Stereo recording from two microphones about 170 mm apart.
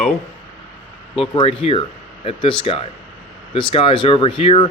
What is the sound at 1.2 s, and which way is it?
Speech, 30° left (ahead or behind).